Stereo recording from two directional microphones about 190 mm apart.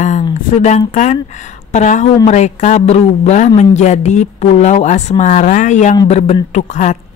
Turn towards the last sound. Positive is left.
turn(degrees=40)  # may be behind; listen again after turning